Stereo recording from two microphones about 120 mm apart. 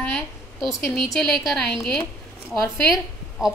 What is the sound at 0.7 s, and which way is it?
Speech, 30° left (ahead or behind).